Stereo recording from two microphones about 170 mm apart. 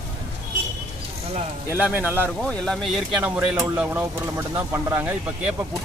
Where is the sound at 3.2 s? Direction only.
10° right (ahead or behind).